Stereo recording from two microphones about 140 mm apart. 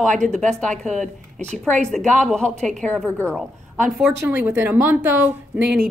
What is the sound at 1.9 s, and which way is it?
A woman's voice, 5° left (ahead or behind).